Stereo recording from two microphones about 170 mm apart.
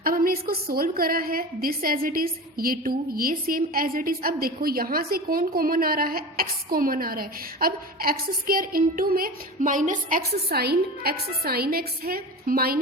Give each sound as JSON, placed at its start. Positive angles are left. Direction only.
{"t": 0.0, "sound": "a woman's voice", "side_deg": -60}